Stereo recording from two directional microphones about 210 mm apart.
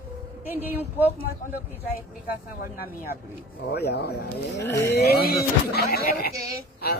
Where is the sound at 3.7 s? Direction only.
50° left (ahead or behind).